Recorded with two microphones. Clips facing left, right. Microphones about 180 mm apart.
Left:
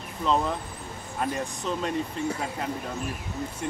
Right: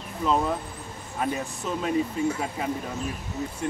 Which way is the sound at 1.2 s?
5° right (ahead or behind).